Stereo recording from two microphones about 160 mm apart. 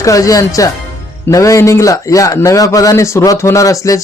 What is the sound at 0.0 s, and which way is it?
A man's voice, 20° left (ahead or behind).